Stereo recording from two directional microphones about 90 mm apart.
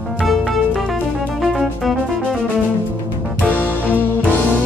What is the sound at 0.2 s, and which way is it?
Music, centre (ahead or behind).